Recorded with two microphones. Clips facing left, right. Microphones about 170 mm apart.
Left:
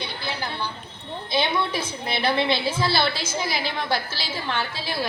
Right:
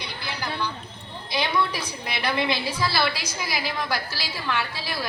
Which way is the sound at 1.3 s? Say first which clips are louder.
Left 1 dB; 25° left (ahead or behind).